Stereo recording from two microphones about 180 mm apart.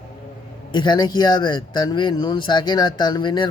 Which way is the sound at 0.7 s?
25° left (ahead or behind).